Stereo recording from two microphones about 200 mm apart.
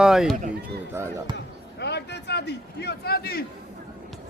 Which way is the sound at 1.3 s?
60° left (ahead or behind).